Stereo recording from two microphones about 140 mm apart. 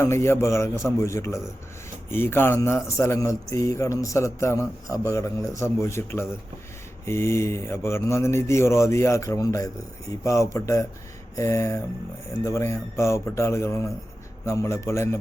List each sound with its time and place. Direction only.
0.0 s a man's voice: 20° left (ahead or behind)